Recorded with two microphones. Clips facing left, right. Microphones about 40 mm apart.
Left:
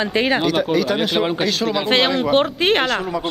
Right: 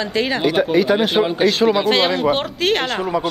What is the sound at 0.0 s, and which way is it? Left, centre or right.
Speech, centre.